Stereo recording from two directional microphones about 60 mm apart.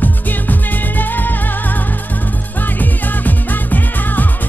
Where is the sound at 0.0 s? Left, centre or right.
Left.